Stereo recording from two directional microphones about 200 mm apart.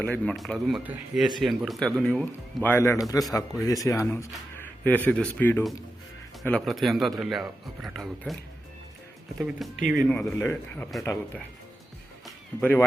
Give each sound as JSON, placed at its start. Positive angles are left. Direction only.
{"t": 0.0, "sound": "a man's voice", "side_deg": 5}
{"t": 9.9, "sound": "a man's voice", "side_deg": 5}
{"t": 12.2, "sound": "music", "side_deg": 5}